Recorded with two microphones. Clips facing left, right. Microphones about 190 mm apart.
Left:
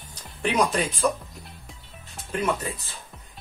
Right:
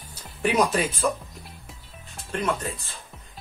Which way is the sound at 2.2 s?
5° left (ahead or behind).